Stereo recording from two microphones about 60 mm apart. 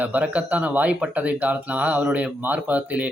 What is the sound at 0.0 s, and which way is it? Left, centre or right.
Speech, right.